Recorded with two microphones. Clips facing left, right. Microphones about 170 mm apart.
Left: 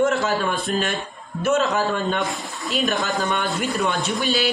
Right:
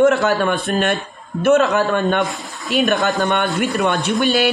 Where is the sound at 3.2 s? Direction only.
65° right (ahead or behind).